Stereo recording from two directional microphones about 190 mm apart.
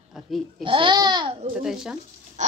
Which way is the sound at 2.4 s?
40° right (ahead or behind).